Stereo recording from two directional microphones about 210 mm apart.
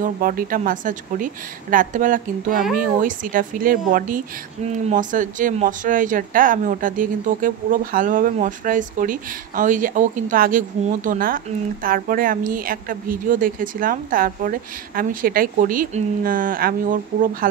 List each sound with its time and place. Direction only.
0.0 s a woman's voice: 40° right (ahead or behind)